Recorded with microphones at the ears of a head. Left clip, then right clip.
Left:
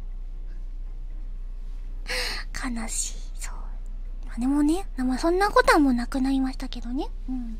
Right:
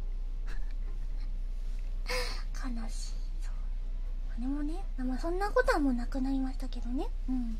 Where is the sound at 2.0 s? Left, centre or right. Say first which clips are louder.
Left 7 dB; left.